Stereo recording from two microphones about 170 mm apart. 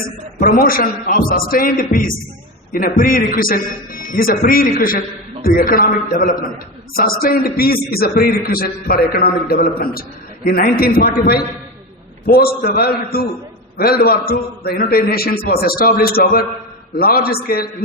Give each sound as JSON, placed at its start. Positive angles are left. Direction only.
{"t": 0.3, "sound": "a man's voice", "side_deg": 55}